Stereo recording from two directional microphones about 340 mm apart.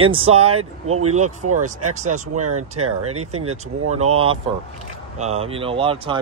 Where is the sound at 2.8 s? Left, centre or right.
Right.